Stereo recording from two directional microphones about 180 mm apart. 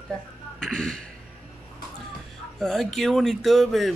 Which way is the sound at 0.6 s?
5° left (ahead or behind).